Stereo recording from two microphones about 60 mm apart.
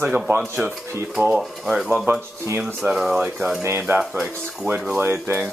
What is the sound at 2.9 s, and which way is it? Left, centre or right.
Speech, centre.